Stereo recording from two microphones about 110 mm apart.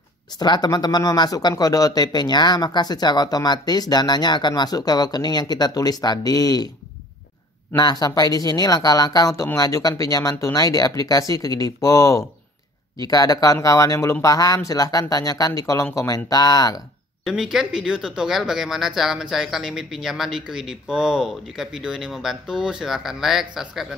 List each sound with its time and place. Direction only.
0.4 s speech: 40° left (ahead or behind)
7.7 s speech: 35° left (ahead or behind)
17.2 s speech: 5° right (ahead or behind)